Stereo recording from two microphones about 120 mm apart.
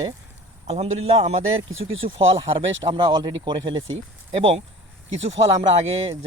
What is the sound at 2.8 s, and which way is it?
Speech, 35° right (ahead or behind).